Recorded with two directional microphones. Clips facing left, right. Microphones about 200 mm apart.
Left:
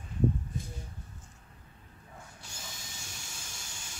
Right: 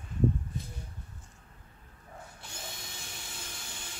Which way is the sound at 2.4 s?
60° right (ahead or behind).